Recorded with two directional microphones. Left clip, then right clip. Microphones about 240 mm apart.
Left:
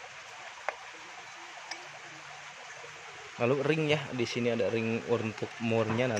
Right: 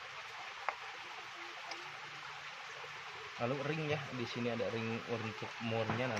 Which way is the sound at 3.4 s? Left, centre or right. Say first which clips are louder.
Left 10 dB; left.